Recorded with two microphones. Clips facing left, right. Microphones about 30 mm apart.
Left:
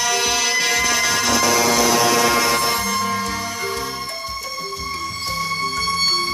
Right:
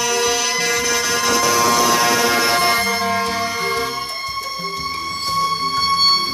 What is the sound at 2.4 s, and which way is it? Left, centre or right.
Music, right.